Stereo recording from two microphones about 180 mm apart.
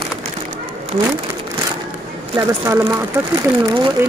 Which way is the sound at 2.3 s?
20° right (ahead or behind).